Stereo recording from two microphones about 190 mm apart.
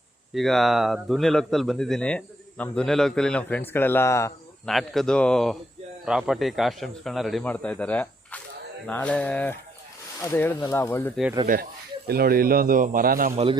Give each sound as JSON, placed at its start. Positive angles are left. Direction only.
{"t": 0.3, "sound": "speech", "side_deg": 0}
{"t": 4.6, "sound": "speech", "side_deg": 0}
{"t": 12.0, "sound": "a man's voice", "side_deg": -55}
{"t": 13.3, "sound": "a man's voice", "side_deg": -30}